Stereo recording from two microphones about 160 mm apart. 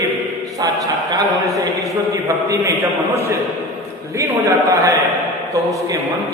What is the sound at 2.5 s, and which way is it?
Speech, 20° right (ahead or behind).